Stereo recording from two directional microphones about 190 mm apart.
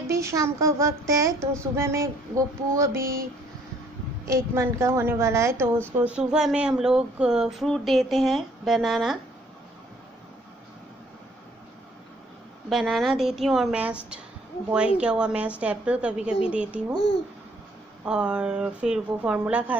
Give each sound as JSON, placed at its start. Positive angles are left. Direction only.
{"t": 0.0, "sound": "speech", "side_deg": -15}
{"t": 4.3, "sound": "speech", "side_deg": -15}
{"t": 12.6, "sound": "speech", "side_deg": 0}
{"t": 18.0, "sound": "speech", "side_deg": -5}